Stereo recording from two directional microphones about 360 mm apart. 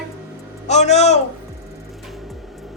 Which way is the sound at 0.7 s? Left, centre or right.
Centre.